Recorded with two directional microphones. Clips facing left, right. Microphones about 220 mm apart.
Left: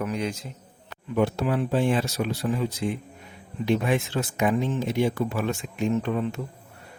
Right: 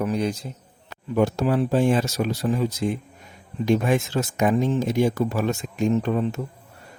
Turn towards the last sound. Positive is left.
turn(degrees=-40)  # may be behind; listen again after turning